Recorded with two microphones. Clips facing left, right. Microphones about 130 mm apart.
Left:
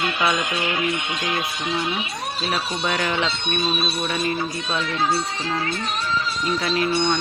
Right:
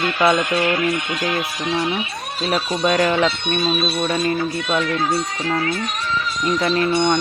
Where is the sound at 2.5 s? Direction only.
30° right (ahead or behind).